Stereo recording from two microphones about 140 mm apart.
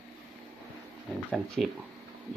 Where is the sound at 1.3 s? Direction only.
5° left (ahead or behind).